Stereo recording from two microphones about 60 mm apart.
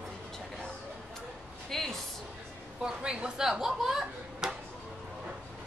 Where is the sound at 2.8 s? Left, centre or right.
Centre.